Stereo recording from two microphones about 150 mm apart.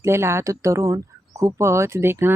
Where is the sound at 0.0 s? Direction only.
15° right (ahead or behind).